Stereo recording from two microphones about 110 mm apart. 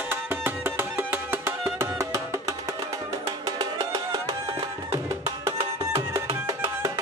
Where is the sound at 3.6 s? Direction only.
35° right (ahead or behind).